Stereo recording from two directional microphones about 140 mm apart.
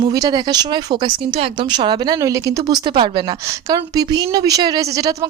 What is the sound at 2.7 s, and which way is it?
A woman's voice, 35° right (ahead or behind).